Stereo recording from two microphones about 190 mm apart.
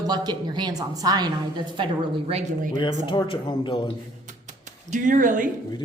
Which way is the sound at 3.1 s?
25° left (ahead or behind).